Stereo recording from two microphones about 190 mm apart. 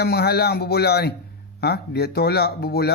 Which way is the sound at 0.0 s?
55° left (ahead or behind).